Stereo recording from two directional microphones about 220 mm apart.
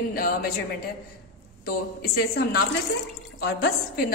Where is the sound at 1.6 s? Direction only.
45° left (ahead or behind).